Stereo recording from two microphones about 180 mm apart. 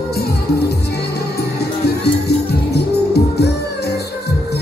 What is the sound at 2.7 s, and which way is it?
Music, 65° left (ahead or behind).